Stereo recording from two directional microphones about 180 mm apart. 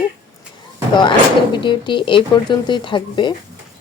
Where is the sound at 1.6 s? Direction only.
25° left (ahead or behind).